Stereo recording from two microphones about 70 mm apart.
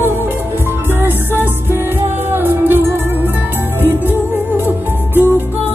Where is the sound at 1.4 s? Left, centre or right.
Right.